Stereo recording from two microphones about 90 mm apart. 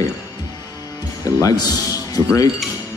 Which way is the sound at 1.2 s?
40° left (ahead or behind).